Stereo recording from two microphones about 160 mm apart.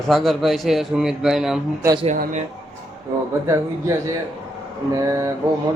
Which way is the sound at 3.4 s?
20° right (ahead or behind).